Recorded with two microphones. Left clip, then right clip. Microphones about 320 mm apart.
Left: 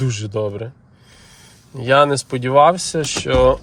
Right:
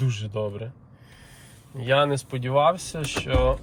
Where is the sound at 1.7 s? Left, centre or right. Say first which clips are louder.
Left 8 dB; centre.